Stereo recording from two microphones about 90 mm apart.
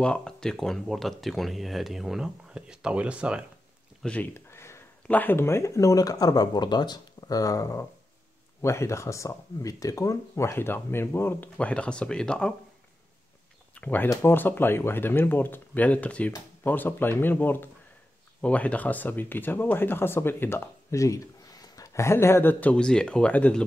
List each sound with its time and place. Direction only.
0.0 s speech: 10° left (ahead or behind); by 3.4 s 10° right (ahead or behind)
4.0 s speech: 15° left (ahead or behind)
4.3 s a sound: 30° left (ahead or behind)
5.0 s speech: 20° left (ahead or behind)
11.5 s speech: 15° left (ahead or behind)
13.7 s speech: 20° left (ahead or behind)